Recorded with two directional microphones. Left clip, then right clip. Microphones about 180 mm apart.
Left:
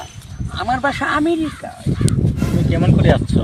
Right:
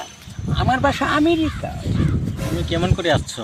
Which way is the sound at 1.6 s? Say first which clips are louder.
Right 1 dB; 30° right (ahead or behind).